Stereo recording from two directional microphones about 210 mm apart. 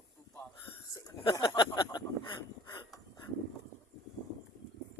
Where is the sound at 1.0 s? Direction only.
20° left (ahead or behind).